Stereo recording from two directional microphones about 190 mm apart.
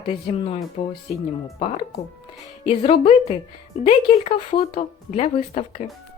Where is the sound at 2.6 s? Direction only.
30° left (ahead or behind).